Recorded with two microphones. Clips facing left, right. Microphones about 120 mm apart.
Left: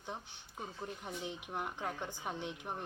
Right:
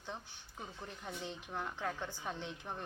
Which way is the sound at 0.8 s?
15° left (ahead or behind).